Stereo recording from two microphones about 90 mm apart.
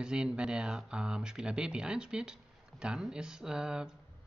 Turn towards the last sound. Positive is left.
turn(degrees=-10)  # may be behind; listen again after turning